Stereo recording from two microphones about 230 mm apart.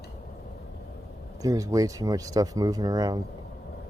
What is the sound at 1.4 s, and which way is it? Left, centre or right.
Speech, centre.